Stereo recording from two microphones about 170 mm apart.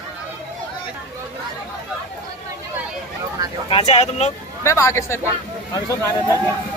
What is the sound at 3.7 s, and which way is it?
Speech, 40° left (ahead or behind).